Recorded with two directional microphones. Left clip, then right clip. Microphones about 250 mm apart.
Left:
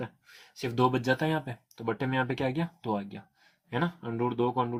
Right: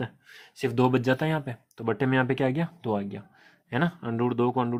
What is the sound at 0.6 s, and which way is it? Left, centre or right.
Speech, right.